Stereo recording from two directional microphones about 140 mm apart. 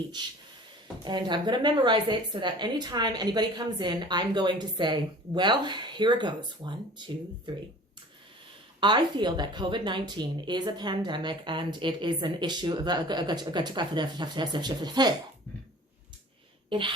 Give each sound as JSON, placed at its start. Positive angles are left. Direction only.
{"t": 1.0, "sound": "a woman's voice", "side_deg": -35}
{"t": 8.8, "sound": "a woman's voice", "side_deg": -35}
{"t": 16.6, "sound": "speech", "side_deg": -35}